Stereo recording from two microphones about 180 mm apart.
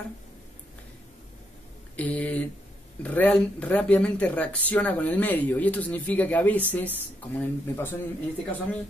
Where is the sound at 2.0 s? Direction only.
5° left (ahead or behind).